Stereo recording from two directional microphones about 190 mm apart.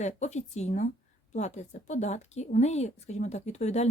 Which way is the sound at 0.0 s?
40° left (ahead or behind).